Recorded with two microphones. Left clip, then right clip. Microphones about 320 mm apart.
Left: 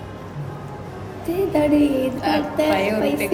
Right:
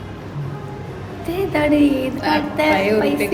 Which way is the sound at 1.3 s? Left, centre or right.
Right.